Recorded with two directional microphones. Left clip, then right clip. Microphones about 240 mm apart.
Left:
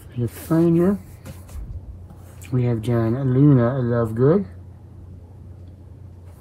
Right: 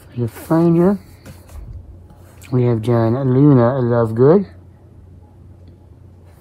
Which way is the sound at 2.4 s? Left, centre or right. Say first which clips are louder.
Right 7 dB; right.